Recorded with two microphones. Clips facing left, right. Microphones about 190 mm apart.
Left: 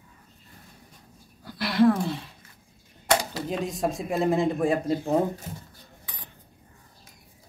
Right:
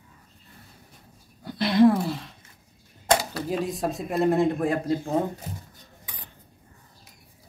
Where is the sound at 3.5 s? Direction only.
5° right (ahead or behind).